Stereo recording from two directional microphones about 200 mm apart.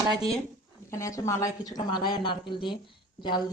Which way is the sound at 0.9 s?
15° left (ahead or behind).